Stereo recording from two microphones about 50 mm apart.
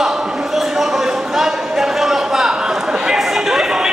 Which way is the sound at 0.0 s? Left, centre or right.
Centre.